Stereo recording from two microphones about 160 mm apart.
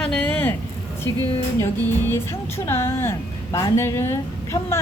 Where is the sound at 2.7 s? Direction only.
15° left (ahead or behind).